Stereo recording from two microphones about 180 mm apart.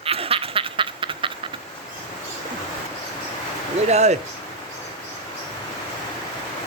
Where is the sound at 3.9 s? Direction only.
40° right (ahead or behind).